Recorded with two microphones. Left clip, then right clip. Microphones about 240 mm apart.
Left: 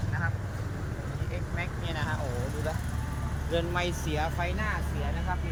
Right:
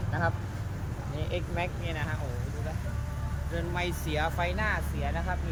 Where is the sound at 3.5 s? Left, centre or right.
Centre.